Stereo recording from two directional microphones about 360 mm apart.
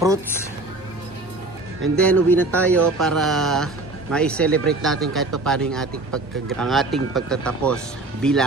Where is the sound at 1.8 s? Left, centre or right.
Centre.